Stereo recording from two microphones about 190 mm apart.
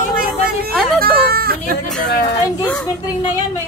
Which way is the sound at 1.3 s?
50° right (ahead or behind).